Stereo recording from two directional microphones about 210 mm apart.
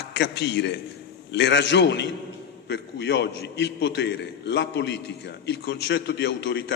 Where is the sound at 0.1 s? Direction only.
55° left (ahead or behind).